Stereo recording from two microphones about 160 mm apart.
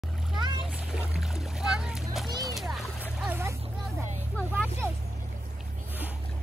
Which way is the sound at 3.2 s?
10° right (ahead or behind).